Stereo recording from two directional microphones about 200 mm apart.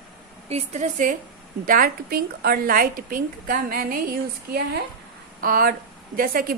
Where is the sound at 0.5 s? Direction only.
35° right (ahead or behind).